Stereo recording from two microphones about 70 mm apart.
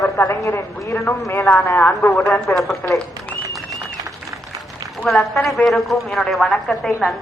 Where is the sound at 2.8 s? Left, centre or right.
Left.